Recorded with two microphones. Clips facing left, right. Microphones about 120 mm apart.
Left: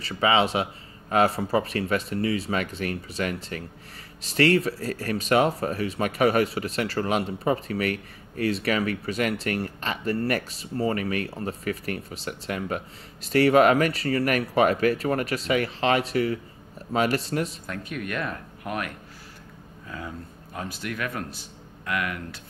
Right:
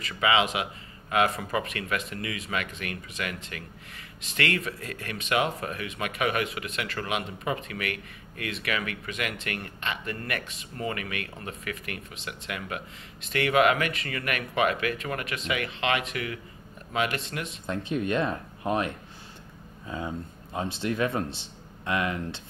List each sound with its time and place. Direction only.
0.0 s speech: 35° left (ahead or behind)
17.6 s a man's voice: 25° right (ahead or behind)